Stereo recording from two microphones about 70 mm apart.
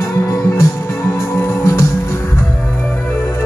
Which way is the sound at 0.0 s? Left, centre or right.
Left.